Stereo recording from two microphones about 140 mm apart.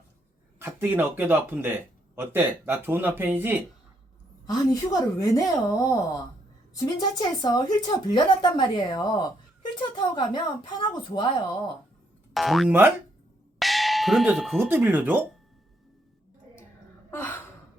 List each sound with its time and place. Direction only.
0.6 s speech: 15° right (ahead or behind)
4.4 s speech: 25° left (ahead or behind)
12.3 s speech: centre (ahead or behind)
13.6 s clang: centre (ahead or behind)
14.6 s speech: 15° right (ahead or behind)
17.1 s sigh: 15° left (ahead or behind)